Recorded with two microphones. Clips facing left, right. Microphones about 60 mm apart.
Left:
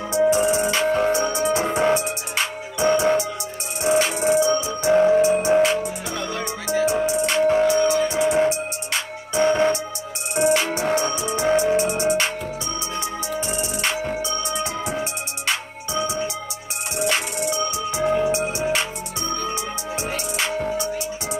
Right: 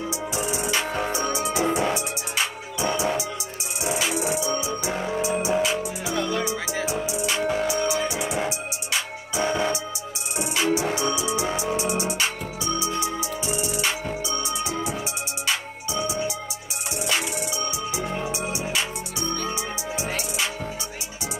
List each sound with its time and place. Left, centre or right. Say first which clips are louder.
0.3 s music: left 7 dB; left
7.8 s music: left 5 dB; centre
8.2 s music: left 8 dB; left
15.4 s music: left 2 dB; left